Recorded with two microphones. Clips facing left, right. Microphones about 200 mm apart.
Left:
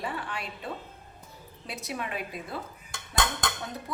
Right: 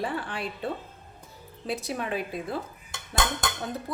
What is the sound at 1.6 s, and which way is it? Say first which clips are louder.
Speech: right 5 dB; 30° right (ahead or behind).